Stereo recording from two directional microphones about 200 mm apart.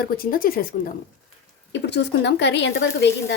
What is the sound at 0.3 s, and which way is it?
Speech, 45° left (ahead or behind).